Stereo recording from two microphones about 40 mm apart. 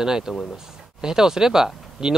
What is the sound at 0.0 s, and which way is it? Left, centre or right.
Speech, centre.